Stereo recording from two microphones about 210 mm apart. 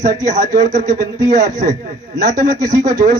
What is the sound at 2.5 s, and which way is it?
Speech, 15° right (ahead or behind).